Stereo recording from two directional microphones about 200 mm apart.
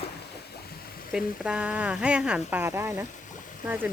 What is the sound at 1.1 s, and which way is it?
Speech, 5° right (ahead or behind).